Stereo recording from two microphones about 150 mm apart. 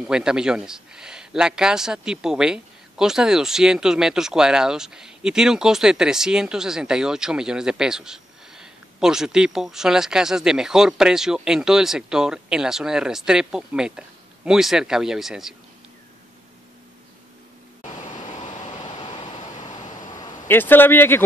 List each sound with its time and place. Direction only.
0.0 s speech: 5° right (ahead or behind)
18.8 s a sound: 30° left (ahead or behind)
20.4 s a man's voice: 15° left (ahead or behind)